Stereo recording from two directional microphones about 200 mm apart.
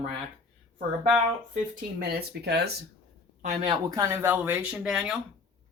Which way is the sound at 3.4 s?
35° right (ahead or behind).